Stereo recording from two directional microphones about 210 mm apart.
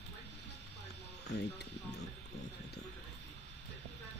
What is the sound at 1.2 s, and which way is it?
Music, 55° left (ahead or behind).